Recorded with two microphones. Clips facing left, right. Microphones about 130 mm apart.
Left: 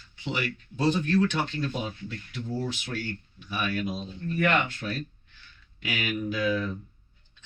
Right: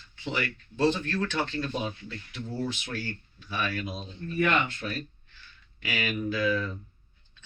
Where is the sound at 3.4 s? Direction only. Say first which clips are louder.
Left 1 dB; 15° left (ahead or behind).